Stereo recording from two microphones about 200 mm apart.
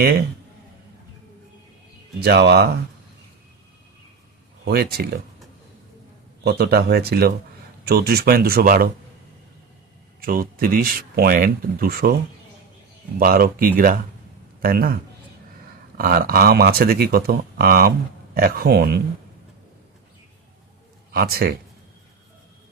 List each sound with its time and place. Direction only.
2.2 s speech: 55° right (ahead or behind)
4.6 s speech: 50° right (ahead or behind)
6.4 s speech: 55° right (ahead or behind)
10.2 s speech: 45° right (ahead or behind)
13.1 s speech: 45° right (ahead or behind)
16.0 s speech: 50° right (ahead or behind)
21.1 s a man's voice: 50° right (ahead or behind)